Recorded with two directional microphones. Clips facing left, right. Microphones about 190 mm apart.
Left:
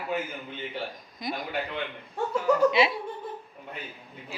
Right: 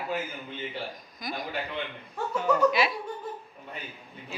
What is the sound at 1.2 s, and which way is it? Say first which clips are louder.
Speech: left 3 dB; 25° left (ahead or behind).